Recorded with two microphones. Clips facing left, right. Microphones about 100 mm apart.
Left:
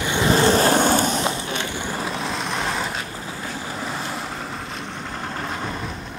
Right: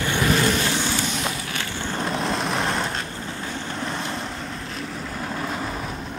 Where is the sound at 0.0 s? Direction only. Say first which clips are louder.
Left 3 dB; 20° left (ahead or behind); by 1.2 s 45° left (ahead or behind).